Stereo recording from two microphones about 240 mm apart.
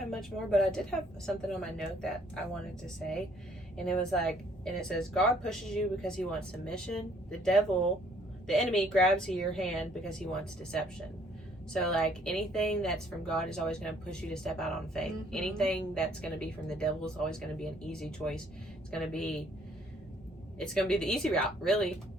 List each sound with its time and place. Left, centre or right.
0.1 s a woman's voice: centre
8.7 s a woman's voice: centre
20.6 s a woman's voice: centre